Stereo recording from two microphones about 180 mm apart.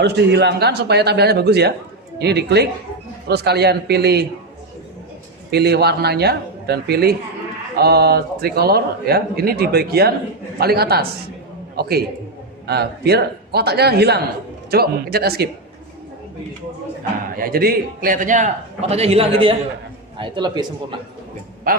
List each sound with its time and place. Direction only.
0.0 s a man's voice: 70° right (ahead or behind)
5.5 s a man's voice: 65° right (ahead or behind)
17.3 s a man's voice: 55° right (ahead or behind); by 20.7 s 25° right (ahead or behind)
21.7 s a man's voice: 50° right (ahead or behind)